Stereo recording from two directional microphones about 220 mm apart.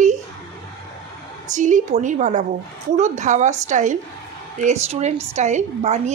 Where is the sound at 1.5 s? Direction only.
35° right (ahead or behind).